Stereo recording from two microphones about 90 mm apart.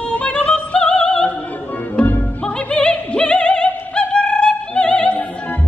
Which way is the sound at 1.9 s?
15° left (ahead or behind).